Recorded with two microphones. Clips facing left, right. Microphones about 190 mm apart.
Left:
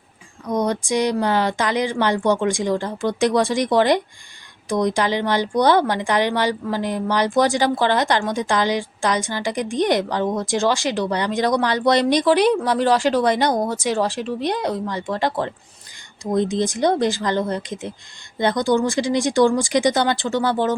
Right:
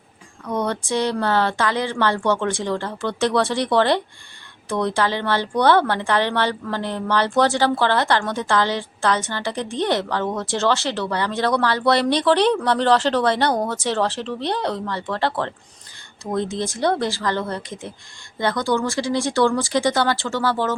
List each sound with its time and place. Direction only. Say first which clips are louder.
0.4 s a woman's voice: left 2 dB; 15° left (ahead or behind)